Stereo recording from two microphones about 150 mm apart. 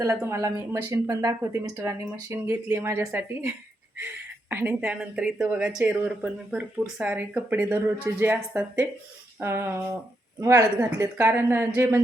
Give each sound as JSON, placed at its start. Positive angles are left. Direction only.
{"t": 0.0, "sound": "a woman's voice", "side_deg": -20}